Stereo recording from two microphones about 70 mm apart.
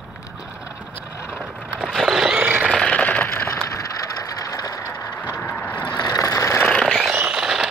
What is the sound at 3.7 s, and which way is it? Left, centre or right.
Ratchet, left.